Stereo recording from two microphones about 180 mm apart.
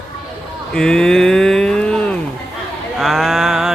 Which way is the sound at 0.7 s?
5° left (ahead or behind).